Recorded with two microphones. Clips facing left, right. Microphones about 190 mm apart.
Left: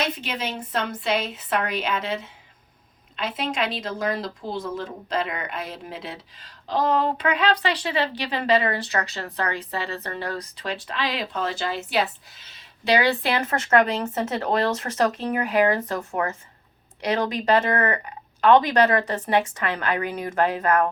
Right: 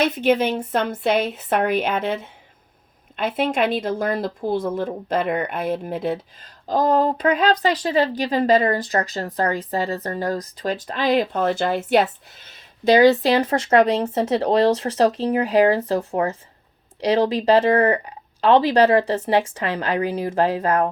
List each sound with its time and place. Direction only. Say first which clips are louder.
0.0 s speech: right 10 dB; 55° right (ahead or behind); by 20.9 s 30° right (ahead or behind)